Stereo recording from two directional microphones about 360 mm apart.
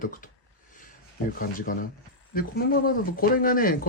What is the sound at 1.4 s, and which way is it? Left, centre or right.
Speech, left.